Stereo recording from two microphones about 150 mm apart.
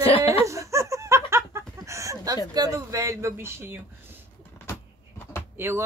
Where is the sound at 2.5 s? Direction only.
25° right (ahead or behind).